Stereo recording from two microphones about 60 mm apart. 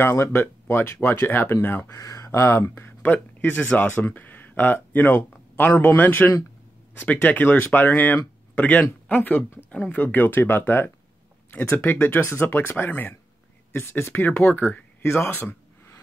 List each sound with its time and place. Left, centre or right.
0.0 s speech: left
1.9 s speech: left
2.7 s speech: left